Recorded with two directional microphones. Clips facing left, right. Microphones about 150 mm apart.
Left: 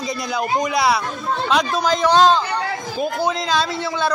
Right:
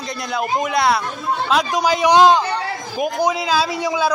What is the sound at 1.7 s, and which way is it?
Speech, 10° right (ahead or behind).